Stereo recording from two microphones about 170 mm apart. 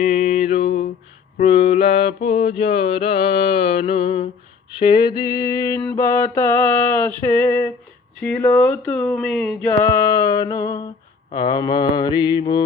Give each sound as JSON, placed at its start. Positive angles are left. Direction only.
{"t": 0.0, "sound": "music", "side_deg": 40}
{"t": 1.4, "sound": "mantra", "side_deg": 35}